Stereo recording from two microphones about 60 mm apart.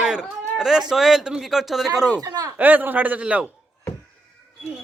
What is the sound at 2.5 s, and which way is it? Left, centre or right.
Speech, right.